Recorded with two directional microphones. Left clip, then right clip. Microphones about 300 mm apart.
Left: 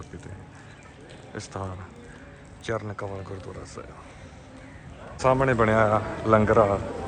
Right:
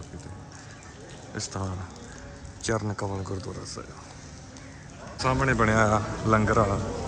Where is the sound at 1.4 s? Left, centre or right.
Centre.